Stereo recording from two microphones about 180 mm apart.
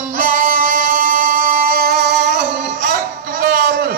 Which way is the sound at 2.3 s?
45° right (ahead or behind).